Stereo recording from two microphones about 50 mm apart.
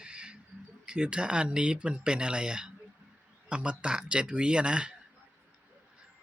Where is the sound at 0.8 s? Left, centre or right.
Centre.